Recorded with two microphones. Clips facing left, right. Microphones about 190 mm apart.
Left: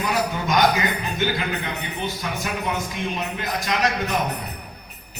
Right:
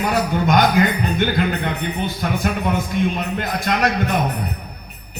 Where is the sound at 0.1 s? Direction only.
55° right (ahead or behind).